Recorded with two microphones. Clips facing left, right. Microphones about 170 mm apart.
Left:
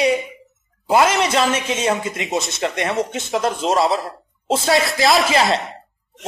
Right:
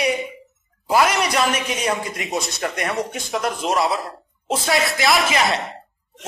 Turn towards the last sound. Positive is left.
turn(degrees=25)  # may be behind; listen again after turning